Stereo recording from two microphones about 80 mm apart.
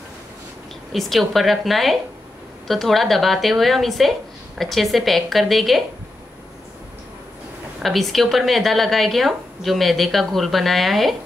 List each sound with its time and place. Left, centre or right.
0.9 s speech: centre
7.8 s speech: centre